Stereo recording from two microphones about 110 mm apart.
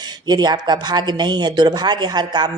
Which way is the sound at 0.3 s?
40° right (ahead or behind).